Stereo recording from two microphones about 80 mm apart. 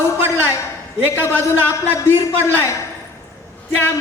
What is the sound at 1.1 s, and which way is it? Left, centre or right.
Speech, left.